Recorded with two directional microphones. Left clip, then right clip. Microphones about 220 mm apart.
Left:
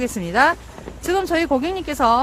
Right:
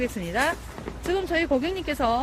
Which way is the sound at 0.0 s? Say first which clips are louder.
Left 8 dB; 25° left (ahead or behind).